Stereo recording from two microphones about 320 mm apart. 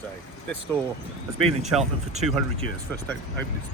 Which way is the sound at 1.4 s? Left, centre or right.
Centre.